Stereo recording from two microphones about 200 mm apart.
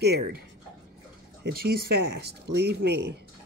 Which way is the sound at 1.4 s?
50° right (ahead or behind).